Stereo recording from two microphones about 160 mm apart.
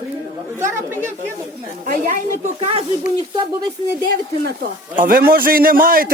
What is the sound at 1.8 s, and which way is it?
Speech, 55° right (ahead or behind).